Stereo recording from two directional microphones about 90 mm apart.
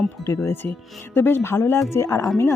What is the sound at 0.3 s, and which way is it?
Speech, 30° left (ahead or behind).